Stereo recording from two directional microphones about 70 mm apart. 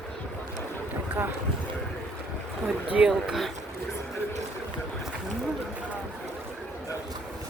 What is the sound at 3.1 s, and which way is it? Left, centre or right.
Speech, centre.